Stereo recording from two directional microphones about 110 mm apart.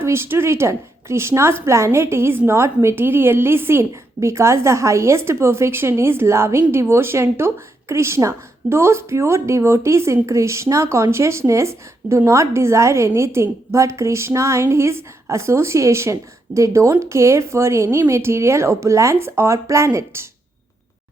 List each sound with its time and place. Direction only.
0.0 s a woman's voice: 25° right (ahead or behind)